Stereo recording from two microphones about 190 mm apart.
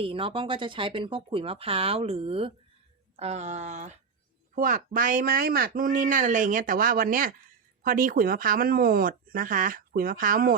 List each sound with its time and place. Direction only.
0.0 s speech: 30° right (ahead or behind); by 10.5 s 45° right (ahead or behind)